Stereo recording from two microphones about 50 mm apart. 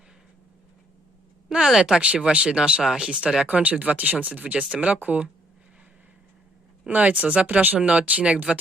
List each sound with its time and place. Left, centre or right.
1.5 s speech: centre
1.8 s speech: right
3.4 s speech: right
6.8 s speech: right
7.8 s speech: right